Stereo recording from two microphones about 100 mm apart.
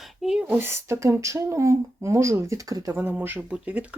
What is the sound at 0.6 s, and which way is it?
Speech, 25° right (ahead or behind).